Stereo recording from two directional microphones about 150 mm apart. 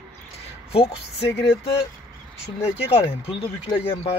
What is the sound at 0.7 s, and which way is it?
Speech, 40° left (ahead or behind).